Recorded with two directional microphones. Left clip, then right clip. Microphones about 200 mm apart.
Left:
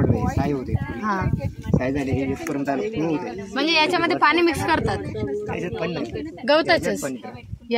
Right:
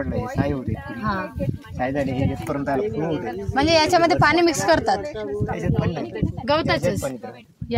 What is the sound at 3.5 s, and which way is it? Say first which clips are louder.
A woman's voice: right 3 dB; 40° right (ahead or behind).